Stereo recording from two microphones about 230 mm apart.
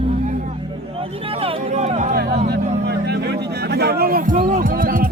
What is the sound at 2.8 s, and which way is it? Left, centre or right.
Music, right.